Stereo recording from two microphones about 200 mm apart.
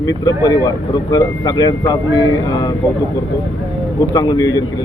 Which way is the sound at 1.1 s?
20° left (ahead or behind).